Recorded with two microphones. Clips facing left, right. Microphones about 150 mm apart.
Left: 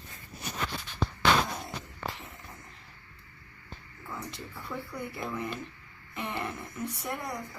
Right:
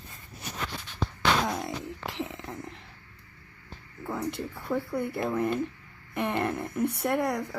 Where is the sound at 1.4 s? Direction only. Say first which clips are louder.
Right 7 dB; 90° right.